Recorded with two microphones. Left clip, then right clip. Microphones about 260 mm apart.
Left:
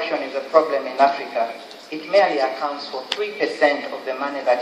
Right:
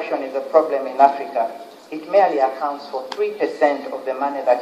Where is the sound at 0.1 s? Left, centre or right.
Left.